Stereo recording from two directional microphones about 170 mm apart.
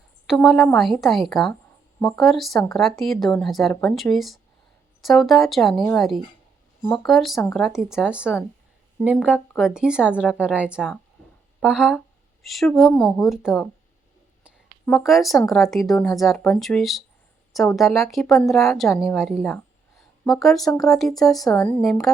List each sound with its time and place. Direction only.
0.3 s a woman's voice: centre (ahead or behind)
14.8 s speech: centre (ahead or behind)
21.4 s a woman's voice: 20° left (ahead or behind)
21.7 s speech: centre (ahead or behind)